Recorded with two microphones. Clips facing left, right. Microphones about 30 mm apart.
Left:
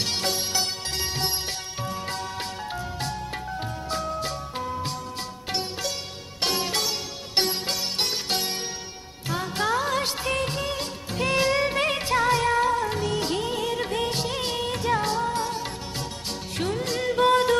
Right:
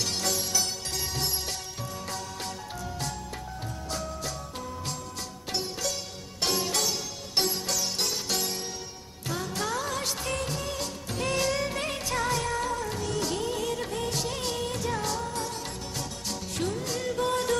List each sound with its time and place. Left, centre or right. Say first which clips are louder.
0.0 s music: left 3 dB; left
9.3 s music of bollywood: left 6 dB; left
16.6 s music: left 4 dB; left
16.8 s music of bollywood: left 11 dB; left